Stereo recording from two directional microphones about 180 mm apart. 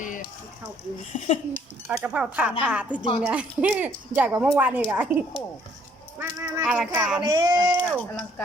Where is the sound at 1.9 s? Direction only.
5° right (ahead or behind).